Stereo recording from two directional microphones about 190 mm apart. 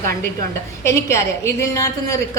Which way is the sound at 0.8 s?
15° left (ahead or behind).